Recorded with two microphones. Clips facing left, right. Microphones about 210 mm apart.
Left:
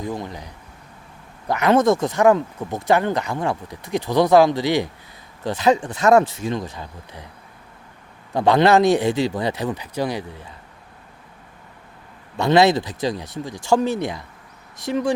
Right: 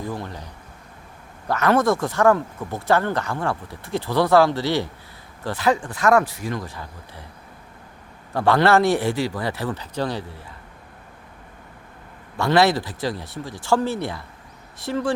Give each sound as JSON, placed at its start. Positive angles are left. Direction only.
{"t": 0.0, "sound": "speech", "side_deg": 15}
{"t": 8.3, "sound": "speech", "side_deg": 20}
{"t": 12.4, "sound": "speech", "side_deg": 20}